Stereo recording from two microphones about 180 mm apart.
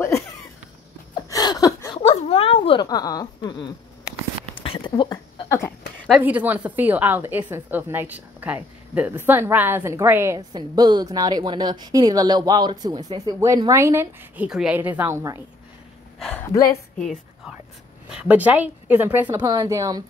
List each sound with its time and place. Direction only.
1.3 s a sound: 20° left (ahead or behind)
2.0 s a sound: 35° left (ahead or behind)
6.0 s a woman's voice: 5° right (ahead or behind)
16.2 s speech: 10° left (ahead or behind)
16.6 s a woman's voice: 45° left (ahead or behind)
18.1 s a woman's voice: 10° right (ahead or behind)
19.4 s a woman's voice: 25° right (ahead or behind)